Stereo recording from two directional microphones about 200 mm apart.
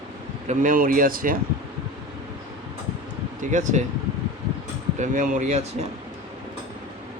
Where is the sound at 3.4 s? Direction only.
40° right (ahead or behind).